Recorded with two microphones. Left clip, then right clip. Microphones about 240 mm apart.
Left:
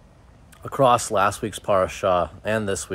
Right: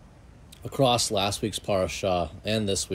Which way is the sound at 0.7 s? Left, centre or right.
Centre.